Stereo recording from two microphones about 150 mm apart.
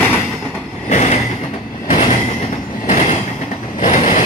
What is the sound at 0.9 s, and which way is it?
Vehicle, 50° left (ahead or behind).